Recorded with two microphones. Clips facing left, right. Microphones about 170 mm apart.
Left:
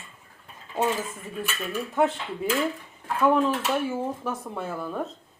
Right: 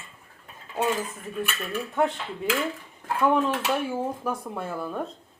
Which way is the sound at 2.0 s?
5° left (ahead or behind).